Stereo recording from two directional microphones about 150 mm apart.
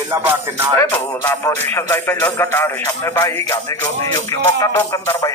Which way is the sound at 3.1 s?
20° left (ahead or behind).